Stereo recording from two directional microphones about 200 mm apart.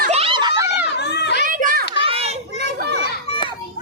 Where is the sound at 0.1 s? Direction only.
30° right (ahead or behind).